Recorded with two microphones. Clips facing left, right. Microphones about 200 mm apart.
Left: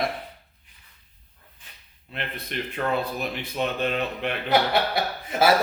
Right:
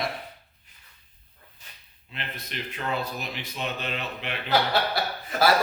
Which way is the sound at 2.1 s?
55° left (ahead or behind).